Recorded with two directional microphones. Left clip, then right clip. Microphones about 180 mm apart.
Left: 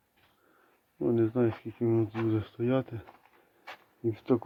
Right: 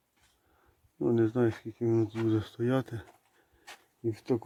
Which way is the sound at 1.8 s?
30° right (ahead or behind).